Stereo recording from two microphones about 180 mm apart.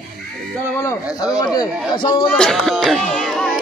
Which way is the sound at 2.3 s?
5° left (ahead or behind).